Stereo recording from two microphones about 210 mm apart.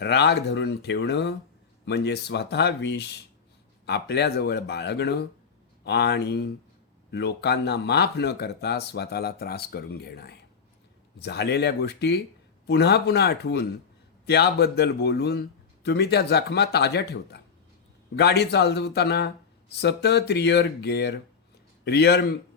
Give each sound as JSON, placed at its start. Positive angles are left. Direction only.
{"t": 0.0, "sound": "speech", "side_deg": 55}